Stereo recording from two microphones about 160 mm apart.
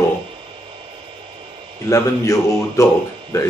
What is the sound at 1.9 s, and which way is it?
Speech, 20° left (ahead or behind).